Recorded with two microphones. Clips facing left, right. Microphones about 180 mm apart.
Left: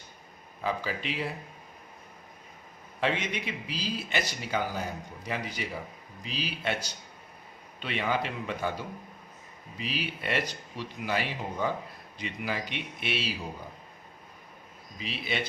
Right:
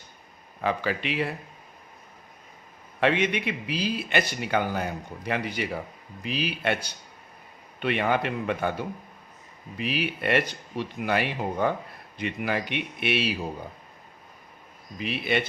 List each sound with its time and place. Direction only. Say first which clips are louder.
0.6 s speech: right 5 dB; 65° right (ahead or behind)
3.0 s speech: right 6 dB; 65° right (ahead or behind)
14.9 s speech: right 7 dB; 60° right (ahead or behind)